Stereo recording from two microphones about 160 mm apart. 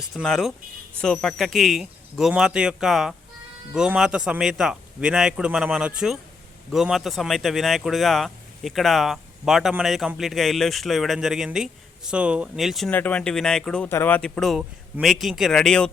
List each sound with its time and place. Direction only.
0.0 s speech: centre (ahead or behind)